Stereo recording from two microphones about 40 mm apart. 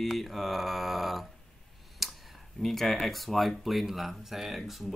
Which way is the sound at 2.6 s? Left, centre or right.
Centre.